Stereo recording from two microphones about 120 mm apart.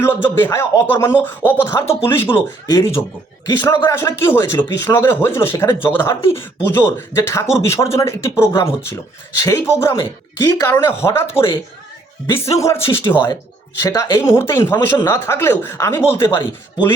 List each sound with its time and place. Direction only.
0.0 s speech: 20° left (ahead or behind)